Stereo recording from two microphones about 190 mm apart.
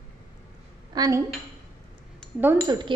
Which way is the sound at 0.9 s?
20° right (ahead or behind).